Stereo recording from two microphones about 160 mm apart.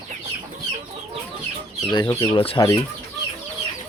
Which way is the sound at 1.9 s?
25° left (ahead or behind).